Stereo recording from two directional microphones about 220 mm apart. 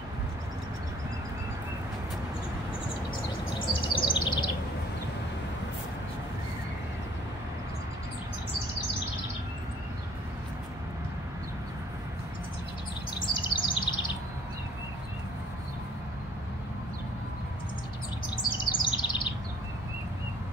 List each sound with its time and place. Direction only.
3.5 s bird vocalization: 20° left (ahead or behind)
13.2 s chirp: 20° left (ahead or behind)
18.8 s chirp: 20° left (ahead or behind)